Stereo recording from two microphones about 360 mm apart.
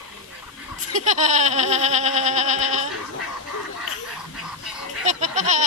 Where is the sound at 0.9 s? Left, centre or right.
Centre.